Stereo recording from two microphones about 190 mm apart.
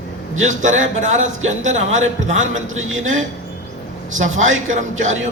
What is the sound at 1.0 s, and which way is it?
A man's voice, 40° right (ahead or behind).